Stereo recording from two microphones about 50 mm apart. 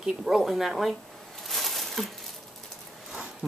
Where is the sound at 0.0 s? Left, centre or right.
Centre.